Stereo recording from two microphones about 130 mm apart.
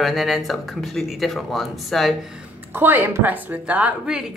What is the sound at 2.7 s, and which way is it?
A woman's voice, 15° right (ahead or behind).